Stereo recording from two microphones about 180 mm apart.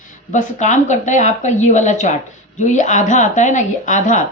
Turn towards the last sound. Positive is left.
turn(degrees=45)  # may be behind; listen again after turning